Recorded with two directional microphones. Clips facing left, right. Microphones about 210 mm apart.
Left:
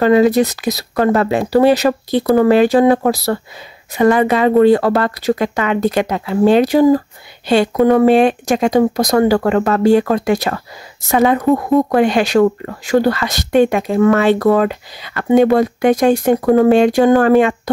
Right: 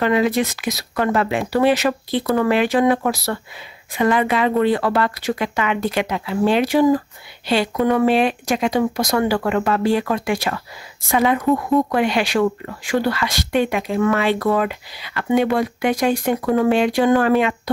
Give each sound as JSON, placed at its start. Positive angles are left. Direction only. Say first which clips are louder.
{"t": 0.0, "sound": "speech", "louder": "left 7 dB", "side_deg": 40}